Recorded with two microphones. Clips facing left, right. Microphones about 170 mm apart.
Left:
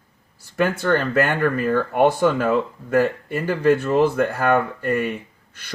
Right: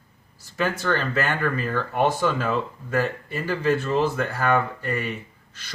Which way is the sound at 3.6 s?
55° left (ahead or behind).